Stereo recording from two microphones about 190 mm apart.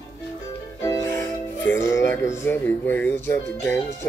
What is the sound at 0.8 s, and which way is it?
Music, 15° left (ahead or behind).